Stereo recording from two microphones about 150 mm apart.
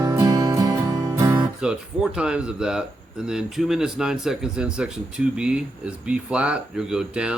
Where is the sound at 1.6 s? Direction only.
5° right (ahead or behind).